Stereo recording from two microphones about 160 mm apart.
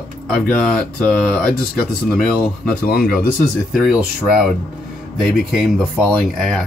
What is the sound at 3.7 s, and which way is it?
Speech, 5° right (ahead or behind).